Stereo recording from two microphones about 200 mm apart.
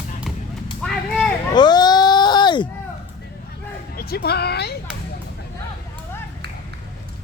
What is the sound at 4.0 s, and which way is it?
Speech, 50° left (ahead or behind).